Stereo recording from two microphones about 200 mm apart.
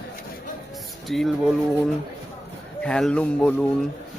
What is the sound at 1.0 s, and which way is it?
Speech, centre (ahead or behind).